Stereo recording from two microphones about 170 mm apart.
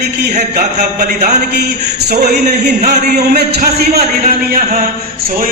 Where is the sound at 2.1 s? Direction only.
70° right (ahead or behind).